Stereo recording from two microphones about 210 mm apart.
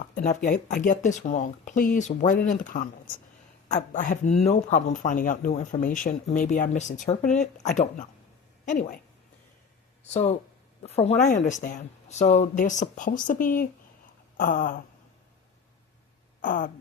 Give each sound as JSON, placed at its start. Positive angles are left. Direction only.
{"t": 0.1, "sound": "speech", "side_deg": 40}
{"t": 10.1, "sound": "speech", "side_deg": 30}
{"t": 16.4, "sound": "speech", "side_deg": 40}